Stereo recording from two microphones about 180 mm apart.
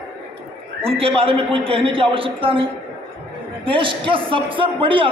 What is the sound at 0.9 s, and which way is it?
A man's voice, 30° right (ahead or behind).